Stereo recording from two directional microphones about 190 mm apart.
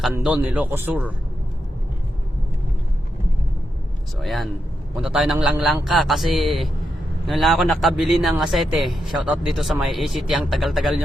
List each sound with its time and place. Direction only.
0.0 s a man's voice: 5° right (ahead or behind)
4.2 s speech: centre (ahead or behind)